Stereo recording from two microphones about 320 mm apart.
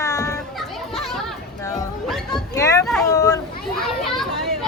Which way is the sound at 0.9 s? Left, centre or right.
Centre.